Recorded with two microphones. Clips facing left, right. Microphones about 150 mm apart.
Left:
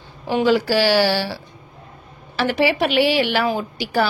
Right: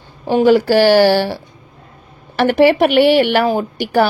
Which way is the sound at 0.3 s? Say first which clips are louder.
Right 6 dB; 50° right (ahead or behind).